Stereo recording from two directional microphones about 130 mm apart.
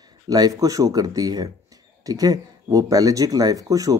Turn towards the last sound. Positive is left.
turn(degrees=-25)  # may be behind; listen again after turning